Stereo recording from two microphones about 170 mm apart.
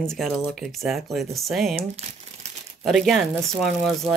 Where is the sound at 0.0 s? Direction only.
5° left (ahead or behind).